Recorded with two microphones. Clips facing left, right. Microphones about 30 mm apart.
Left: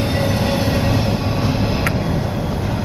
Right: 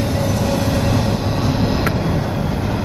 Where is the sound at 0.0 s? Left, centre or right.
Left; by 1.3 s centre.